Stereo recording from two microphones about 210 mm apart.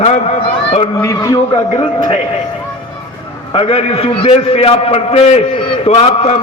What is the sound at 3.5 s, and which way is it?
A man's voice, 25° left (ahead or behind).